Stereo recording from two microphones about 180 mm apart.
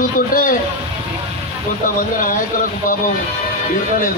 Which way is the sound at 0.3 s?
50° left (ahead or behind).